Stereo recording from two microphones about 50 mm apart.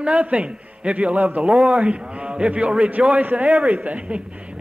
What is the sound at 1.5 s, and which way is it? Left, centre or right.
Speech, centre.